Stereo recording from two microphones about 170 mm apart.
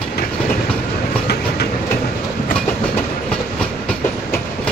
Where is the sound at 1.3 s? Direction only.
75° left (ahead or behind).